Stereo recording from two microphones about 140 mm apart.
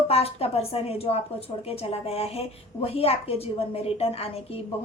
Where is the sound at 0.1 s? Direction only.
45° left (ahead or behind).